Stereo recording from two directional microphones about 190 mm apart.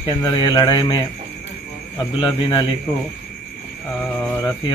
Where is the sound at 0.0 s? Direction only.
20° left (ahead or behind).